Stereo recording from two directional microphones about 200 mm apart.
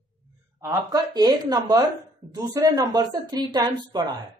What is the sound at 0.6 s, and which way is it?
A woman's voice, 15° right (ahead or behind).